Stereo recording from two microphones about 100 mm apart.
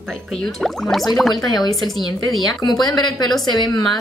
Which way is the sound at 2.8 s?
40° left (ahead or behind).